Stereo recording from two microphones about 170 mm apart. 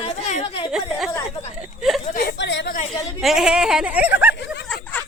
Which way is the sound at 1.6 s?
Centre (ahead or behind).